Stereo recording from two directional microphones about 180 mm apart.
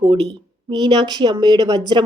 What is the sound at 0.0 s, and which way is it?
A woman's voice, 25° right (ahead or behind).